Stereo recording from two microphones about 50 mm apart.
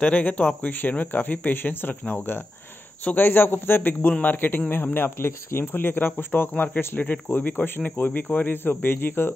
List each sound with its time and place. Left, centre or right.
0.0 s speech: left
0.7 s speech: left